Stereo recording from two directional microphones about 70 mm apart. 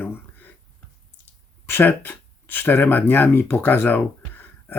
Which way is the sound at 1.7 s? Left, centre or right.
Left.